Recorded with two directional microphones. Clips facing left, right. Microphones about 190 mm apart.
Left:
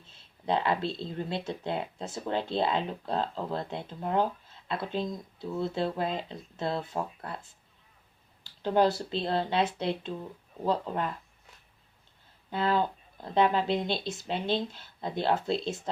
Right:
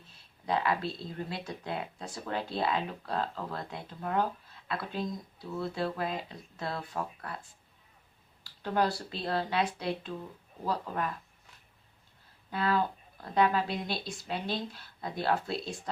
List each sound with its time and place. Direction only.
0.1 s speech: 25° left (ahead or behind)
8.6 s speech: 25° left (ahead or behind)
12.5 s speech: 25° left (ahead or behind)